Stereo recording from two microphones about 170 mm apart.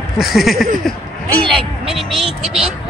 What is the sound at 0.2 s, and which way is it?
Speech, centre (ahead or behind).